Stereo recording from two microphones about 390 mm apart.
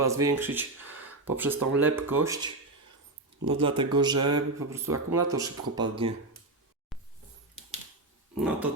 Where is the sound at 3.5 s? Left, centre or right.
Centre.